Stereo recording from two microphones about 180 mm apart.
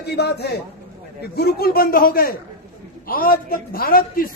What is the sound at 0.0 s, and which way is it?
A man's voice, 65° left (ahead or behind).